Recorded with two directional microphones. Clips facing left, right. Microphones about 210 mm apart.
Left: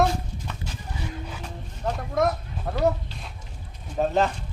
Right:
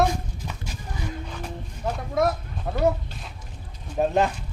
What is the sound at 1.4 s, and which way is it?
Speech, 5° right (ahead or behind).